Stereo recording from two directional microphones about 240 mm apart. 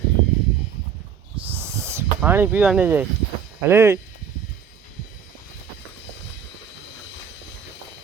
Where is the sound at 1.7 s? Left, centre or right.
Centre.